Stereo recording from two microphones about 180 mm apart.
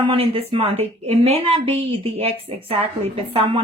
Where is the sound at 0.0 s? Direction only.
30° right (ahead or behind).